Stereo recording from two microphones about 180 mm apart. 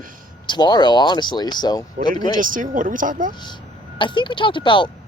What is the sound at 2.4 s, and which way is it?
Speech, 50° right (ahead or behind).